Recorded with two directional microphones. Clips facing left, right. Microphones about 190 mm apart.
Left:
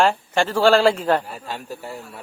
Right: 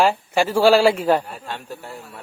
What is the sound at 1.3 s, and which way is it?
Speech, centre (ahead or behind).